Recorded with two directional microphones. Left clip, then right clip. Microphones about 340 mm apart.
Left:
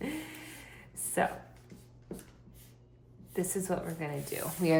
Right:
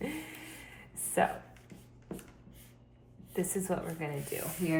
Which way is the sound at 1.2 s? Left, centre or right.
Centre.